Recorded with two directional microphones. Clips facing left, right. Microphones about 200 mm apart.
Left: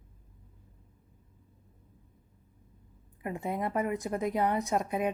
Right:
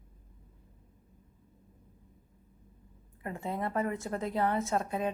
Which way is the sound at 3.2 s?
15° left (ahead or behind).